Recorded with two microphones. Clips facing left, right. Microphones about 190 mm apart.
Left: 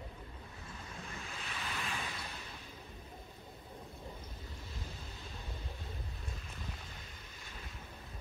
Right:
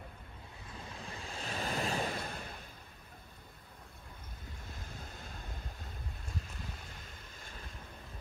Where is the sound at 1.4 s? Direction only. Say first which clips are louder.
Right 8 dB; 45° right (ahead or behind).